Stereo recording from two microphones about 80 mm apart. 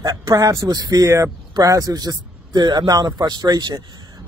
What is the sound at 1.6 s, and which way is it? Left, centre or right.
Speech, right.